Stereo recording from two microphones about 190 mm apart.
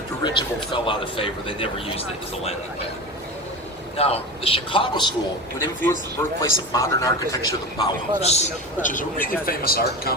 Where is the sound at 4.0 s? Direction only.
30° left (ahead or behind).